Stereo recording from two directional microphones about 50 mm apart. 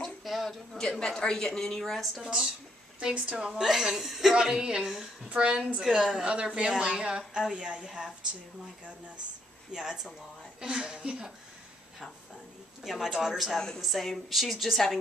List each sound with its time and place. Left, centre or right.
0.0 s a sound: centre
0.7 s a woman's voice: centre
3.0 s a woman's voice: centre
6.2 s a woman's voice: right
9.7 s a woman's voice: centre
12.8 s a woman's voice: centre